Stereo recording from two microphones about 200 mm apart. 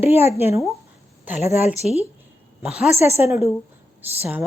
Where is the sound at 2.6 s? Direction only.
5° right (ahead or behind).